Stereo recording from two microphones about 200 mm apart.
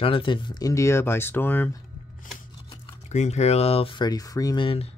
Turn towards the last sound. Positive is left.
turn(degrees=30)  # may be behind; listen again after turning